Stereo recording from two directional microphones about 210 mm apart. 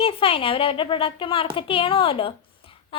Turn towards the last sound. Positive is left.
turn(degrees=25)  # may be behind; listen again after turning